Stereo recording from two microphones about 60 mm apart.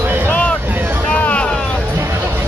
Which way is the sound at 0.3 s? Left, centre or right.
Left.